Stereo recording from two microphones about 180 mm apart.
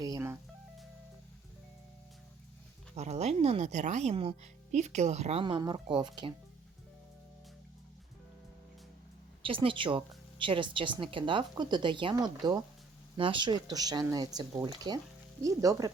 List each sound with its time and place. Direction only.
0.0 s music: 15° right (ahead or behind)
2.9 s speech: 40° right (ahead or behind)
9.4 s a woman's voice: 30° right (ahead or behind)